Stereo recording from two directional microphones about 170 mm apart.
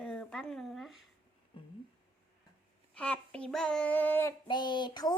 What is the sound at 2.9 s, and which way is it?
Speech, 5° left (ahead or behind).